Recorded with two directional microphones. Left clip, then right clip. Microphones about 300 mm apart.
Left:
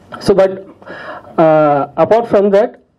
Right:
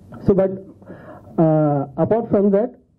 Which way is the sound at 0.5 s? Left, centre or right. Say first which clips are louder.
Left 7 dB; centre.